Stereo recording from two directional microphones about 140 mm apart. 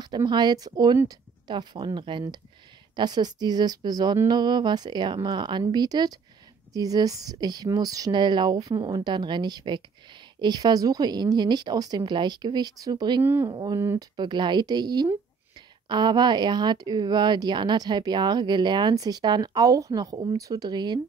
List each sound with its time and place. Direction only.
0.0 s speech: 30° right (ahead or behind)
13.2 s speech: 15° right (ahead or behind)
13.5 s speech: 30° right (ahead or behind)
14.1 s speech: 35° right (ahead or behind)